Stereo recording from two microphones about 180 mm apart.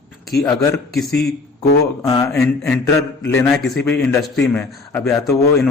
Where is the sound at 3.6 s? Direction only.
5° left (ahead or behind).